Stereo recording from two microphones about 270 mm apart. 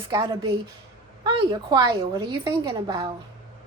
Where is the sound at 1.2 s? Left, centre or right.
Centre.